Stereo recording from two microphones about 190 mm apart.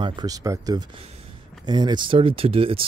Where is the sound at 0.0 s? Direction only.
25° right (ahead or behind).